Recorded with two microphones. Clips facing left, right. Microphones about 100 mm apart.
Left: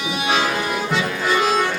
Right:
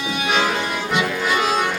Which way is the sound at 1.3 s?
35° left (ahead or behind).